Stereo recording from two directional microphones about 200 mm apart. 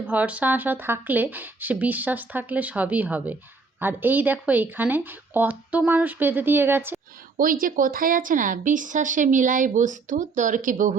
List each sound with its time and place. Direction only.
0.0 s speech: 5° right (ahead or behind)
7.3 s speech: 45° right (ahead or behind)